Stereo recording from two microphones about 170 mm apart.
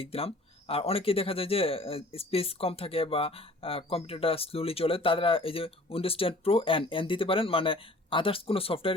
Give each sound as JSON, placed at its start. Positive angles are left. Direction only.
{"t": 0.0, "sound": "speech", "side_deg": 35}